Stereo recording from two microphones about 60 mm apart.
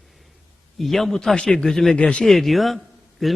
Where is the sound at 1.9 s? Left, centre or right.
Centre.